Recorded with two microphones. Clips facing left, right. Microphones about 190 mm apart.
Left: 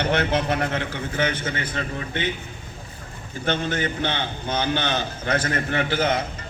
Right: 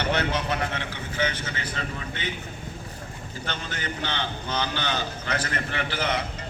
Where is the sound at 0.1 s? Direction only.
55° left (ahead or behind).